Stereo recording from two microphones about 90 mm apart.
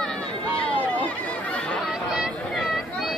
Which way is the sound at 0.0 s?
10° left (ahead or behind).